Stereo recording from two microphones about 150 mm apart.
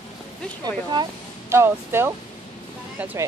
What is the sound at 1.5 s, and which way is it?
Speech, 15° right (ahead or behind).